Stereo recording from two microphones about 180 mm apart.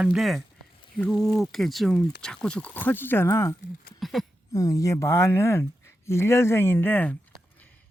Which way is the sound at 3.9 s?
Centre (ahead or behind).